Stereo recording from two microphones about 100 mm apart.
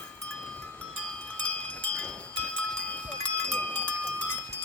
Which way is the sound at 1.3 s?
15° left (ahead or behind).